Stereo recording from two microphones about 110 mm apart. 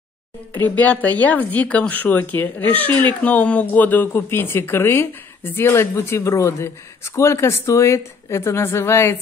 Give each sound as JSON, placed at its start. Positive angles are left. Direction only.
{"t": 0.5, "sound": "speech", "side_deg": 15}